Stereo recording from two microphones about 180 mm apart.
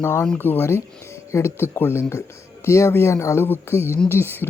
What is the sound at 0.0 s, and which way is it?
Speech, 15° left (ahead or behind).